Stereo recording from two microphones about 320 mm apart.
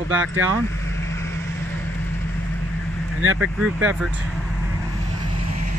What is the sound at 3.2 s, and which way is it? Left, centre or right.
Speech, right.